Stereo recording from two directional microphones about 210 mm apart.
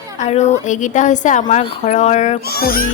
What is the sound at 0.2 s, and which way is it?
A woman's voice, 35° left (ahead or behind).